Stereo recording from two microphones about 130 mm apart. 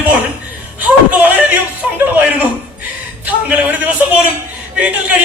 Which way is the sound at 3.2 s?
10° right (ahead or behind).